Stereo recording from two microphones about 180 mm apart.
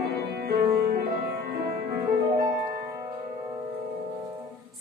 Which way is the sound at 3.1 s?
25° right (ahead or behind).